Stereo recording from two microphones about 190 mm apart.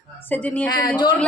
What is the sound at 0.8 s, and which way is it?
Speech, 25° left (ahead or behind).